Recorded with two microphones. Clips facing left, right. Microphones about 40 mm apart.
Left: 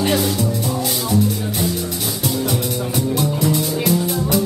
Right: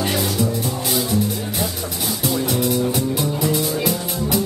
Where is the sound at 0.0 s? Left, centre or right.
Centre.